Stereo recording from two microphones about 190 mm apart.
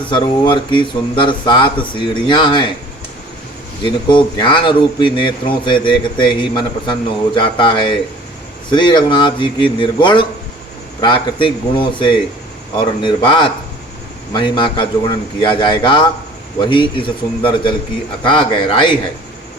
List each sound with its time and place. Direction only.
0.1 s a man's voice: 25° left (ahead or behind)
3.8 s a man's voice: 25° left (ahead or behind)